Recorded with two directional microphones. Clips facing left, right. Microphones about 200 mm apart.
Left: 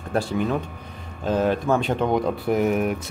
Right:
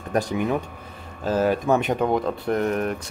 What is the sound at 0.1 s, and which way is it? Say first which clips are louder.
Speech: even; 15° right (ahead or behind).